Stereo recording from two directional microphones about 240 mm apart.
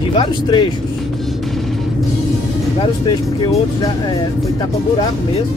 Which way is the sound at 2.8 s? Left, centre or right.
Centre.